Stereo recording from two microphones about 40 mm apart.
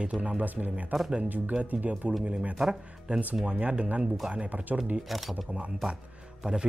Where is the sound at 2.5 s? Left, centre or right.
Centre.